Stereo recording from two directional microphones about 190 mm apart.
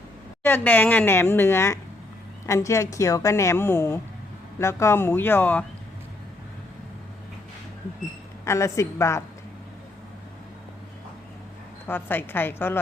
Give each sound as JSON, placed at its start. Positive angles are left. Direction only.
{"t": 0.4, "sound": "a woman's voice", "side_deg": 10}
{"t": 8.4, "sound": "a woman's voice", "side_deg": 15}
{"t": 11.9, "sound": "a woman's voice", "side_deg": 10}